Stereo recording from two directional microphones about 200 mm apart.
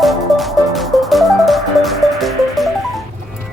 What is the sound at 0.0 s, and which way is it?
Music, centre (ahead or behind).